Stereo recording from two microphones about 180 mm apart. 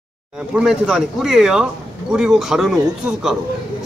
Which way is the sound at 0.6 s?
5° right (ahead or behind).